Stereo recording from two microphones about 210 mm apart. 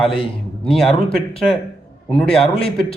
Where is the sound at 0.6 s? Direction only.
Centre (ahead or behind).